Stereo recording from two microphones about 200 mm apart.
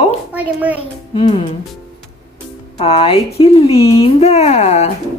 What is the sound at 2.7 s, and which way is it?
Speech, 30° left (ahead or behind).